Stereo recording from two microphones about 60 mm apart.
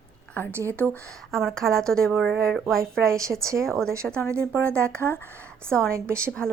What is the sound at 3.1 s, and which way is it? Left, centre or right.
Speech, right.